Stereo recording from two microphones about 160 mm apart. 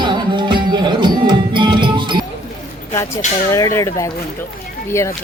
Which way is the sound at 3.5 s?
20° left (ahead or behind).